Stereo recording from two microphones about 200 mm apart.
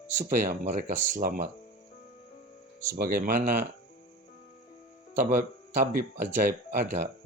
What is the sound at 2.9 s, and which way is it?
Speech, 45° right (ahead or behind).